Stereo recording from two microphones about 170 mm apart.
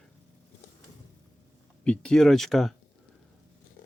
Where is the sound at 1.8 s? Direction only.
5° left (ahead or behind).